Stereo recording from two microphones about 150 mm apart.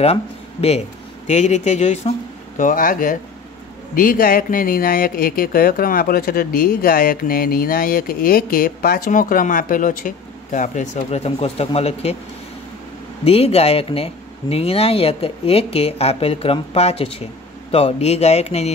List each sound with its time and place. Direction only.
0.0 s speech: 45° left (ahead or behind)
13.2 s speech: 40° left (ahead or behind)